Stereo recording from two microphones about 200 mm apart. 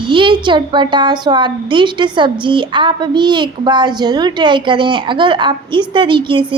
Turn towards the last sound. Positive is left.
turn(degrees=-25)  # may be behind; listen again after turning